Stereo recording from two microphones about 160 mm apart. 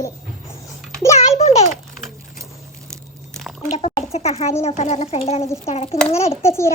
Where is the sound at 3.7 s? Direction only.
40° left (ahead or behind).